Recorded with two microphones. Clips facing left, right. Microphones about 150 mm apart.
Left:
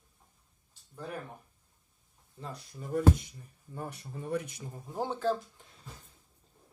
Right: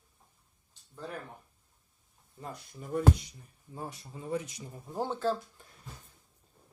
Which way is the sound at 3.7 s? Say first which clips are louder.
Left 1 dB; 65° left (ahead or behind).